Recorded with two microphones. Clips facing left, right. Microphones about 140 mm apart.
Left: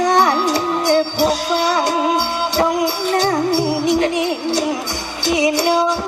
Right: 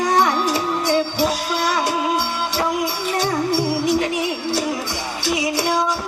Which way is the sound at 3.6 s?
Centre (ahead or behind).